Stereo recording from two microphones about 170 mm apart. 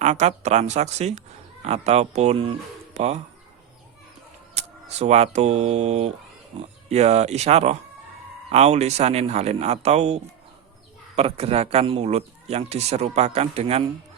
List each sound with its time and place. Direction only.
0.0 s speech: 45° right (ahead or behind)
4.5 s speech: 40° right (ahead or behind)